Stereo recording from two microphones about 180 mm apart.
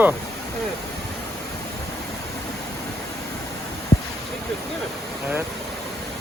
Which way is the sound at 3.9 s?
35° left (ahead or behind).